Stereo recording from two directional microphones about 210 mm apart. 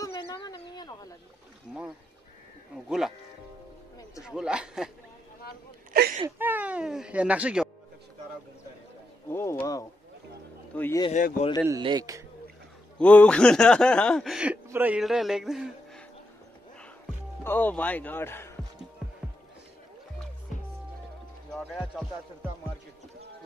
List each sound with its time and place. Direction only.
0.0 s a sound: 20° left (ahead or behind)
1.7 s a sound: centre (ahead or behind)
4.2 s speech: 5° right (ahead or behind)
5.9 s whimper: 45° right (ahead or behind)
6.2 s speech: 10° right (ahead or behind)
9.3 s a man's voice: 10° left (ahead or behind)
11.6 s speech: 20° right (ahead or behind)
13.0 s speech: 5° left (ahead or behind)
17.4 s a man's voice: 10° left (ahead or behind)
21.5 s speech: centre (ahead or behind)